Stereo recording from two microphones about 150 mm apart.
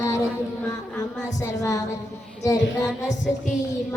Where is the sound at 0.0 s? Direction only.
15° left (ahead or behind).